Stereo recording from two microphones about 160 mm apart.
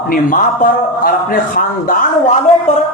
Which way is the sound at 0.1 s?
55° left (ahead or behind).